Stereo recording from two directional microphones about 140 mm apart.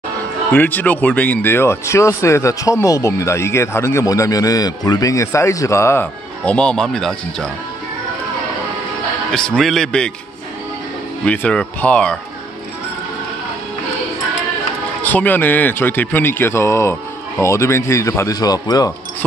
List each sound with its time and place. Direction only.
0.5 s speech: 10° left (ahead or behind)
9.3 s speech: 5° left (ahead or behind)
11.2 s speech: 10° left (ahead or behind)
15.0 s speech: 10° left (ahead or behind)